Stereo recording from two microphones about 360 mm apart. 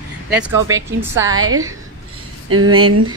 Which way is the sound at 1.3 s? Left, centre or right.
Right.